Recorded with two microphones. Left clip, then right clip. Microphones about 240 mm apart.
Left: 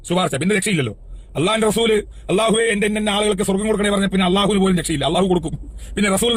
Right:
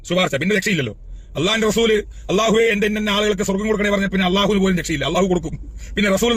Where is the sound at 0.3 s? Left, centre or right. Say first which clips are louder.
Right 1 dB; left.